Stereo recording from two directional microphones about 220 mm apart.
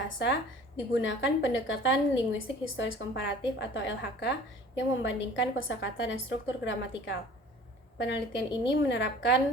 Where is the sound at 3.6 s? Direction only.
55° left (ahead or behind).